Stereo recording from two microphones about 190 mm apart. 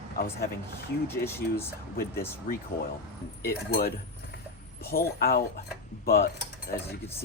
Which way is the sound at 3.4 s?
55° left (ahead or behind).